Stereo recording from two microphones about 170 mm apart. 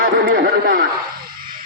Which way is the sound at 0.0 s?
60° right (ahead or behind).